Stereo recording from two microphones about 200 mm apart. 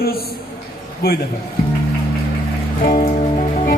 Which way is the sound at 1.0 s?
50° left (ahead or behind).